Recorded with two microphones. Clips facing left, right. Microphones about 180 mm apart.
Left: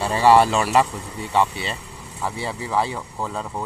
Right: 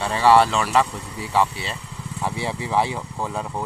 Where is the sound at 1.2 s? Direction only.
Centre (ahead or behind).